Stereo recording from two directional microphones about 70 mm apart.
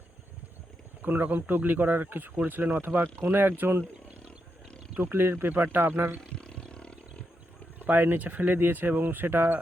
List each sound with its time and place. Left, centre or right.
1.0 s speech: right
4.9 s speech: right
6.3 s roaring cats: centre
7.9 s speech: right